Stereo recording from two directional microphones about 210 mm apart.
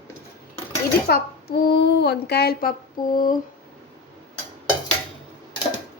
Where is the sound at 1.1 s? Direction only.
50° left (ahead or behind).